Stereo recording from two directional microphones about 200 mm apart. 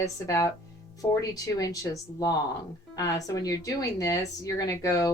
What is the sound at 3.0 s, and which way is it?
Speech, 15° left (ahead or behind).